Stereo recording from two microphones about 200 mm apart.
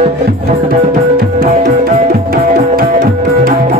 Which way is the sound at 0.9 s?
40° right (ahead or behind).